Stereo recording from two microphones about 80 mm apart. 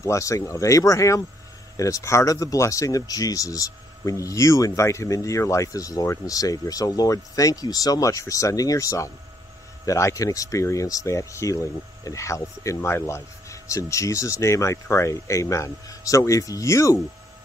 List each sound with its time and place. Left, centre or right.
0.0 s speech: left